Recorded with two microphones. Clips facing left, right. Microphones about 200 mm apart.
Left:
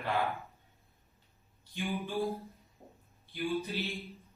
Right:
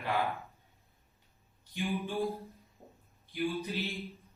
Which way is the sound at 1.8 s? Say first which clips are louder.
Right 1 dB; centre (ahead or behind).